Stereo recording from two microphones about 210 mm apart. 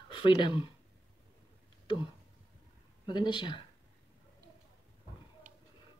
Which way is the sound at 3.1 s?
20° left (ahead or behind).